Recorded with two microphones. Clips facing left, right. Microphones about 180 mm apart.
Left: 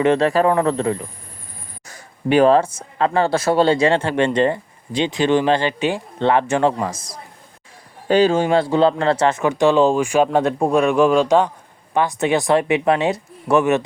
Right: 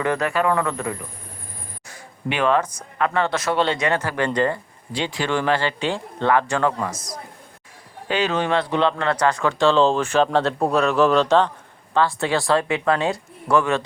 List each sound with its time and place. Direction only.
0.0 s speech: 30° left (ahead or behind)